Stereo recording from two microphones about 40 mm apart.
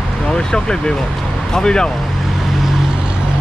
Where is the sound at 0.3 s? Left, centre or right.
Centre.